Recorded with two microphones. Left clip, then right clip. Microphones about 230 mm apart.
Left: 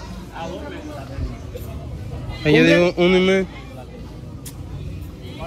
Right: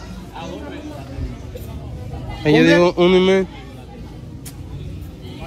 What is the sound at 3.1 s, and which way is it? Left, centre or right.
Speech, centre.